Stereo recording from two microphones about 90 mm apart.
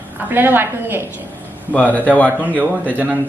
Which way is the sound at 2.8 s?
20° right (ahead or behind).